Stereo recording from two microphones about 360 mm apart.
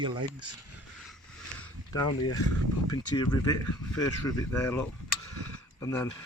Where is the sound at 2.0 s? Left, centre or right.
Left.